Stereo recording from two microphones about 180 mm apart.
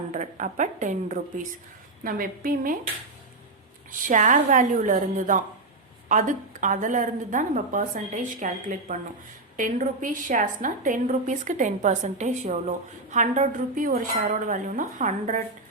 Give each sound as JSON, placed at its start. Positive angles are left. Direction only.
{"t": 0.1, "sound": "a woman's voice", "side_deg": -45}
{"t": 4.0, "sound": "a woman's voice", "side_deg": -45}